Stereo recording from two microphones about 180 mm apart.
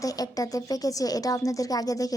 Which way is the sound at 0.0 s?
20° left (ahead or behind).